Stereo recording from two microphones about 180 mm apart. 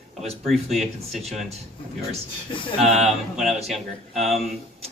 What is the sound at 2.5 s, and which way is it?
Speech, 30° left (ahead or behind).